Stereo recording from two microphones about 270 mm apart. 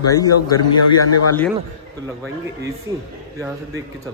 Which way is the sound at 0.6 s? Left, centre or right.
Left.